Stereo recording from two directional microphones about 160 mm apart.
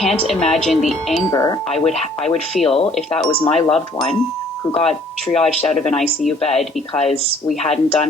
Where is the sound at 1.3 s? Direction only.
20° left (ahead or behind).